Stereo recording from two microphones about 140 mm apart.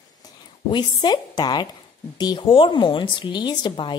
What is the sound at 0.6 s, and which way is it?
Speech, 30° left (ahead or behind).